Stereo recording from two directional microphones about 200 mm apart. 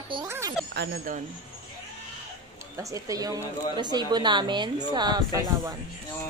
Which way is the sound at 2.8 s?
15° right (ahead or behind).